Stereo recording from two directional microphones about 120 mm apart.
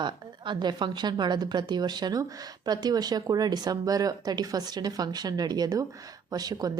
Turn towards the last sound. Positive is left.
turn(degrees=-30)  # may be behind; listen again after turning